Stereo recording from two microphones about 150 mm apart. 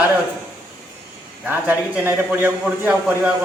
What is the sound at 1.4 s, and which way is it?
A man's voice, 10° right (ahead or behind).